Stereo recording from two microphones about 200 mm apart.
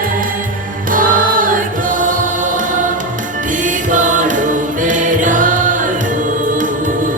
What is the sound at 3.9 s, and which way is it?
Music, 40° right (ahead or behind).